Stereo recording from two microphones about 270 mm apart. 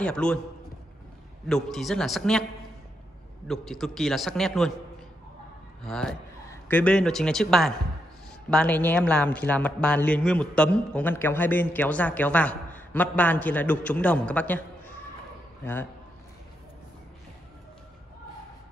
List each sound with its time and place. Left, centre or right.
0.0 s a man's voice: centre
1.5 s a man's voice: centre
3.4 s a man's voice: centre
5.9 s a man's voice: centre
15.6 s a man's voice: centre